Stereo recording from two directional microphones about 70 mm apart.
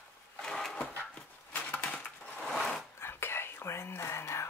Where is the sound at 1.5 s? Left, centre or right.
Left.